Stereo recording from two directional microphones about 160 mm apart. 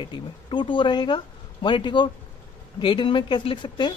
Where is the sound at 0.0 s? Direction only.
30° left (ahead or behind).